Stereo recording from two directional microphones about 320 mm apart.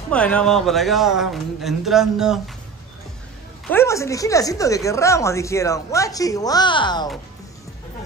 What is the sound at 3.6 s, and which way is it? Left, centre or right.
Speech, centre.